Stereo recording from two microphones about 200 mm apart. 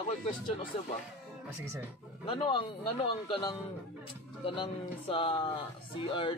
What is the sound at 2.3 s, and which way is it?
Speech, 25° left (ahead or behind).